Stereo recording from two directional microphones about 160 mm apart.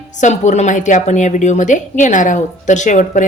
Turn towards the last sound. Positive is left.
turn(degrees=50)  # may be behind; listen again after turning